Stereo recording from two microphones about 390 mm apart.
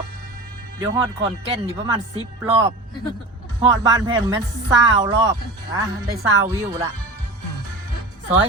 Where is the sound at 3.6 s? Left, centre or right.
Centre.